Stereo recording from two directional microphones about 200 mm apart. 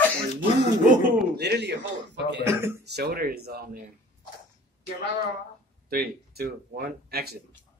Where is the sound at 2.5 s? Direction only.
10° right (ahead or behind).